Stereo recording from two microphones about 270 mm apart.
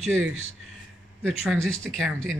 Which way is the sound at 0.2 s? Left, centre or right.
Right.